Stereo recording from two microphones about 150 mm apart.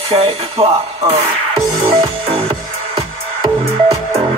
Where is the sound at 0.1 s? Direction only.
40° right (ahead or behind).